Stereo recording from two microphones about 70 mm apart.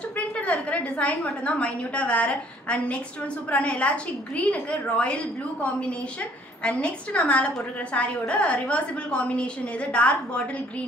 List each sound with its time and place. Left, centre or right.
0.5 s a woman's voice: centre